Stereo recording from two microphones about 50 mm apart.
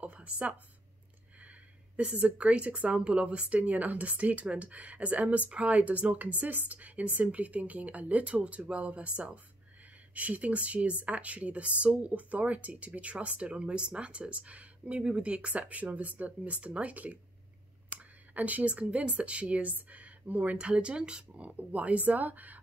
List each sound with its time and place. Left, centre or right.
0.0 s a woman's voice: right
2.0 s speech: right
20.5 s speech: right